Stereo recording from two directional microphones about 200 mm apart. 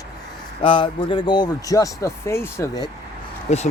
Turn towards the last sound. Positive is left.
turn(degrees=35)  # may be behind; listen again after turning